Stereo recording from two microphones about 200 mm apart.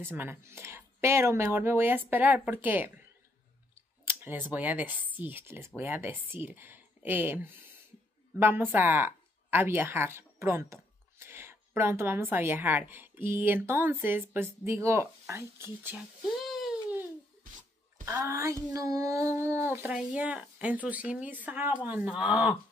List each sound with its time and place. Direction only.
0.0 s child singing: 10° right (ahead or behind)
4.0 s speech: 10° right (ahead or behind)
5.8 s child singing: 10° right (ahead or behind)
8.4 s speech: 10° right (ahead or behind)
16.3 s a sound: centre (ahead or behind)
17.4 s music: 40° right (ahead or behind)
18.0 s child singing: 15° right (ahead or behind)